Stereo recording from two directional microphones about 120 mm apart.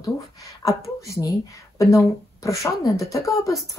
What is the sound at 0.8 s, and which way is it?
A woman's voice, 25° left (ahead or behind).